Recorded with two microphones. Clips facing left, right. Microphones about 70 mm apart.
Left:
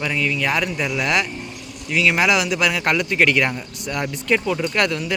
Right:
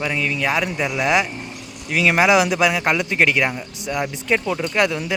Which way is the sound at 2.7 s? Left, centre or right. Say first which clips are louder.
Right 1 dB; centre.